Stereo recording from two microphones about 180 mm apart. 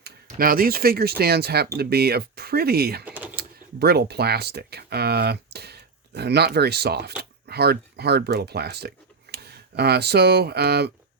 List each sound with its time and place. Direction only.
0.3 s speech: 55° right (ahead or behind)
3.0 s a sound: 10° right (ahead or behind)
3.3 s speech: 60° right (ahead or behind)